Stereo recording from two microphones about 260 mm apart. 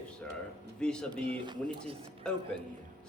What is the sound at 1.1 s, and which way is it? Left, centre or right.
Speech, centre.